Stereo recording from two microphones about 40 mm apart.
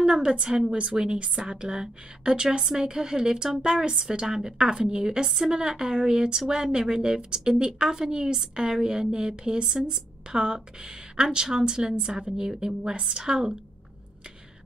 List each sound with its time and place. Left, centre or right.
0.0 s a woman's voice: right